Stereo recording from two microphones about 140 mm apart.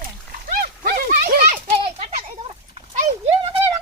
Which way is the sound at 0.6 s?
90° right.